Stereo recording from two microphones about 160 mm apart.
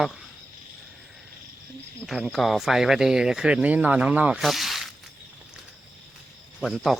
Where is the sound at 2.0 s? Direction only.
Centre (ahead or behind).